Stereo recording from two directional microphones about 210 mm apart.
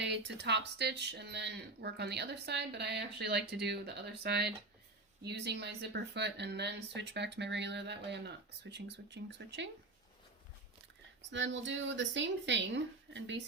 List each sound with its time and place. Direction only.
0.0 s speech: 55° right (ahead or behind)
11.3 s speech: 60° right (ahead or behind)